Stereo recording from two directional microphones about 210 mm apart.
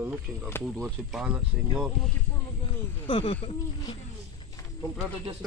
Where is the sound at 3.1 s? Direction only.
25° left (ahead or behind).